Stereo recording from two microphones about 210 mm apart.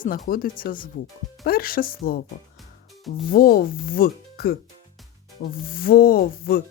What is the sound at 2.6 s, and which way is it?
Music, centre (ahead or behind).